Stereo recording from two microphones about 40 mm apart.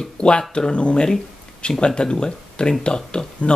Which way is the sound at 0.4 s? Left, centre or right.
Left.